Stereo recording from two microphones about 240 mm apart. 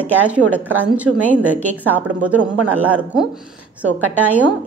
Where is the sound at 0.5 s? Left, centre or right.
Centre.